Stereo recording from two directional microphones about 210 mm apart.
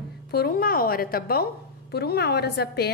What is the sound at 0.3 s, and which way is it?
A woman's voice, 45° left (ahead or behind).